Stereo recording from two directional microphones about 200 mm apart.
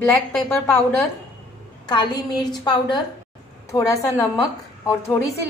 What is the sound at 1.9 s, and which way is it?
A woman's voice, 20° left (ahead or behind).